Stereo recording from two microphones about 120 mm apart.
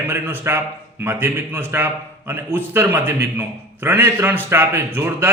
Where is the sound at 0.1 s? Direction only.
15° right (ahead or behind).